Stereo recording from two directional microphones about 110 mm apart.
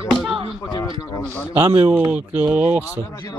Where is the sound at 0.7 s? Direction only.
35° left (ahead or behind).